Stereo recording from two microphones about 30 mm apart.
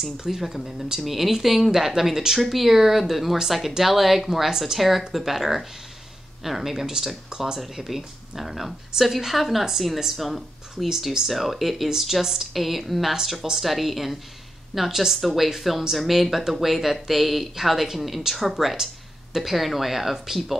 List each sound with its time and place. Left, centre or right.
0.4 s a woman's voice: centre
7.2 s speech: right
7.5 s a woman's voice: centre
14.9 s a woman's voice: centre
15.2 s speech: centre